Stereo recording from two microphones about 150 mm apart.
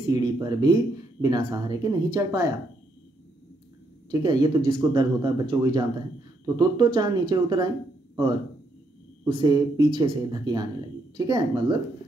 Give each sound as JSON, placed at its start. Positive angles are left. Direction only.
{"t": 0.1, "sound": "speech", "side_deg": -25}
{"t": 4.1, "sound": "speech", "side_deg": -25}
{"t": 9.3, "sound": "speech", "side_deg": -30}